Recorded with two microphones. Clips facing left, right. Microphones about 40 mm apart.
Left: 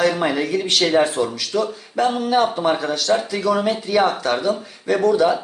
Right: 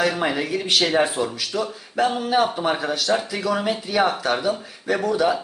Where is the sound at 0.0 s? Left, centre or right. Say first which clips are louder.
Left 3 dB; centre.